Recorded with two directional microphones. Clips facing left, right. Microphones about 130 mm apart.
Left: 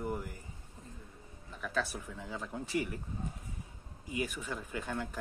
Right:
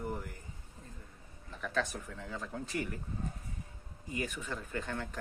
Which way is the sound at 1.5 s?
5° left (ahead or behind).